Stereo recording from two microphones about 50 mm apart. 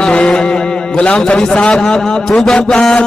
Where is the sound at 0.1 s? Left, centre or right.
Centre.